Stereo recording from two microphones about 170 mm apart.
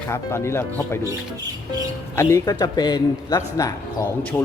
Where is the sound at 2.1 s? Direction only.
20° left (ahead or behind).